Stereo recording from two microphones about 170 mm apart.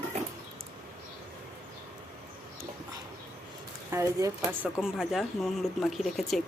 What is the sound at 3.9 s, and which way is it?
Speech, 15° right (ahead or behind).